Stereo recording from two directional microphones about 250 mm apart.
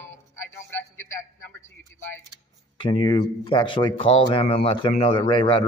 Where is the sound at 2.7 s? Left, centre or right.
Centre.